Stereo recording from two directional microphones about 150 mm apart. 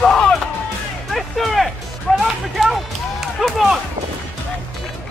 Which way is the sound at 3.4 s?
Centre (ahead or behind).